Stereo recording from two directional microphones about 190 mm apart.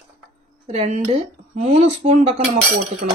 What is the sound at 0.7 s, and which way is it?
Speech, 35° right (ahead or behind).